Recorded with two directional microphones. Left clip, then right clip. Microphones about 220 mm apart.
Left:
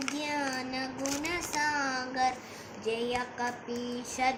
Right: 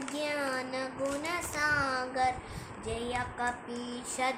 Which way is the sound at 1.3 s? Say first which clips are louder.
Even; 15° right (ahead or behind).